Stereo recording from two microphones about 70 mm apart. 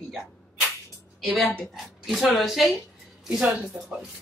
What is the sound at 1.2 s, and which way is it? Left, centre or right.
A woman's voice, centre.